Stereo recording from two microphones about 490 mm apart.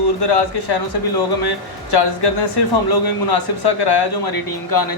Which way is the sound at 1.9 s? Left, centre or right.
Left.